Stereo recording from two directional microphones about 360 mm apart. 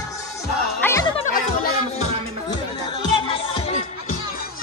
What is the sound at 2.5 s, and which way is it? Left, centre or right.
Music, centre.